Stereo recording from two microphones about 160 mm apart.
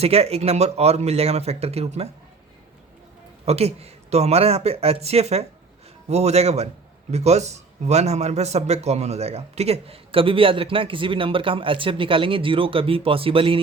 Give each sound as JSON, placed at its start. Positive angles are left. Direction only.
{"t": 0.0, "sound": "a man's voice", "side_deg": -40}
{"t": 3.4, "sound": "a man's voice", "side_deg": -40}